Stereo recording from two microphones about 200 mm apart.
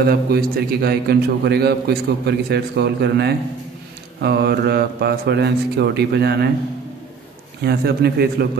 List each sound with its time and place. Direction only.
0.0 s a man's voice: 50° right (ahead or behind)
7.6 s speech: 55° right (ahead or behind)